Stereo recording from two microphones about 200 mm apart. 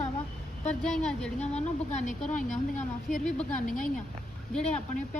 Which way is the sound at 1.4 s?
35° left (ahead or behind).